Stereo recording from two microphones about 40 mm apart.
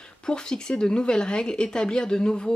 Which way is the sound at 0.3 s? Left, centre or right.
Centre.